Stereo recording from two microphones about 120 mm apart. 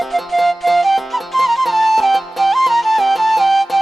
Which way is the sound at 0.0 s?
Centre (ahead or behind).